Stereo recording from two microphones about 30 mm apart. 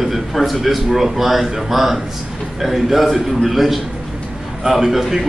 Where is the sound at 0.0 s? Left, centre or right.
Centre.